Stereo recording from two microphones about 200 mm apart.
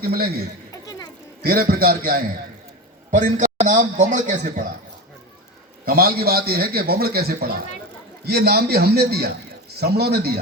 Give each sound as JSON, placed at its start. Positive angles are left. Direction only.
{"t": 0.0, "sound": "a man's voice", "side_deg": -50}
{"t": 0.7, "sound": "a sound", "side_deg": 20}
{"t": 1.4, "sound": "a man's voice", "side_deg": -45}
{"t": 3.1, "sound": "a man's voice", "side_deg": -40}
{"t": 5.8, "sound": "a man's voice", "side_deg": -50}